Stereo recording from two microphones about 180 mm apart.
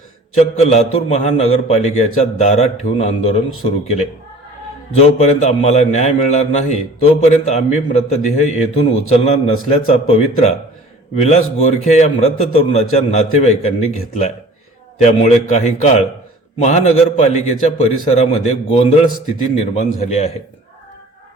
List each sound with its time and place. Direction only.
0.3 s a man's voice: 35° left (ahead or behind)